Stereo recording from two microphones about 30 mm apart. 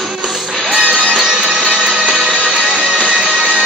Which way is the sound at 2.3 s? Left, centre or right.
Right.